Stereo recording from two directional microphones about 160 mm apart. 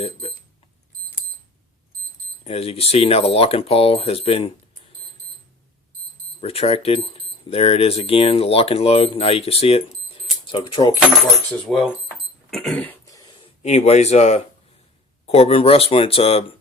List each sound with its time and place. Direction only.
0.0 s speech: 40° left (ahead or behind)
2.4 s speech: 40° left (ahead or behind)
6.4 s speech: 40° left (ahead or behind)
11.7 s speech: 5° left (ahead or behind)
12.5 s a sound: centre (ahead or behind)
13.1 s a sound: 20° left (ahead or behind)
13.6 s speech: 45° left (ahead or behind)